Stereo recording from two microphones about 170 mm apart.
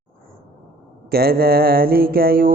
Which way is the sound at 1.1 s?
65° right (ahead or behind).